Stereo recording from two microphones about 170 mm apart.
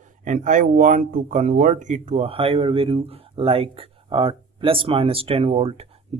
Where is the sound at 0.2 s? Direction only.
45° right (ahead or behind).